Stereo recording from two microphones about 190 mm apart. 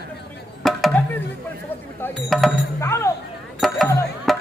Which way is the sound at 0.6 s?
Centre (ahead or behind).